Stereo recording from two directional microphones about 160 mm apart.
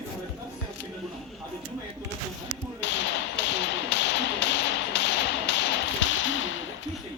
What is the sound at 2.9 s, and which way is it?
Tap, 90° left.